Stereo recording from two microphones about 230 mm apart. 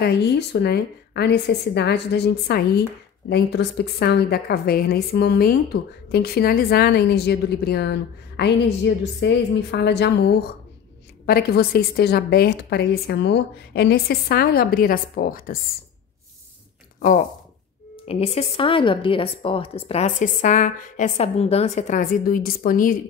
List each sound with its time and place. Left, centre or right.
0.0 s a woman's voice: left
18.0 s a woman's voice: left